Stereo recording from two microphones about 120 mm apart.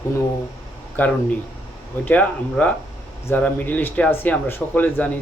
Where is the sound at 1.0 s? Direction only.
15° left (ahead or behind).